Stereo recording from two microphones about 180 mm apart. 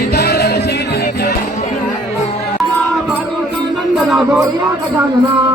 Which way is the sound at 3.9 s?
Centre (ahead or behind).